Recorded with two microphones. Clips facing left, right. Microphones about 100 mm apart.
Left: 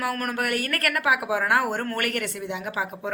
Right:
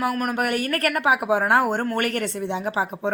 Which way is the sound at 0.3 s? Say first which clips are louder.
Right 3 dB; 20° right (ahead or behind).